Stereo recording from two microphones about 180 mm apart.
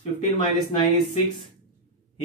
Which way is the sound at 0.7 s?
25° left (ahead or behind).